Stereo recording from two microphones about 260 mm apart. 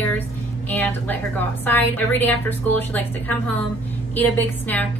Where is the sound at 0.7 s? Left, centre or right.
Centre.